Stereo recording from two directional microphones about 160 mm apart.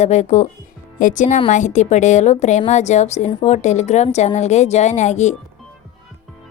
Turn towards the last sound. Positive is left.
turn(degrees=45)  # may be behind; listen again after turning